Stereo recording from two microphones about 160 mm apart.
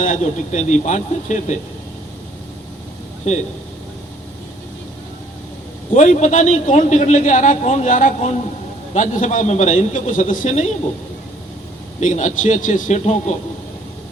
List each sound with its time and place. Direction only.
0.0 s a man's voice: 55° left (ahead or behind)
3.3 s a man's voice: 45° left (ahead or behind)
5.9 s a man's voice: 50° left (ahead or behind)
11.9 s a man's voice: 50° left (ahead or behind)